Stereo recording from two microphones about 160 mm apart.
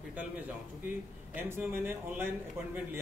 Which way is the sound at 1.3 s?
15° right (ahead or behind).